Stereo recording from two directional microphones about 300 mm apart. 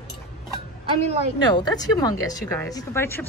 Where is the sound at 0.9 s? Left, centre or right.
Right.